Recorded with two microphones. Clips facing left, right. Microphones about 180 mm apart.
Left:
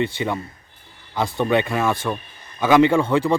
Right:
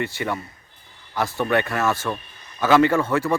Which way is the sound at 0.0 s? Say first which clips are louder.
Left 3 dB; 20° left (ahead or behind).